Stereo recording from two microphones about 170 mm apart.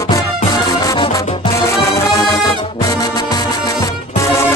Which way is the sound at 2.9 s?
20° left (ahead or behind).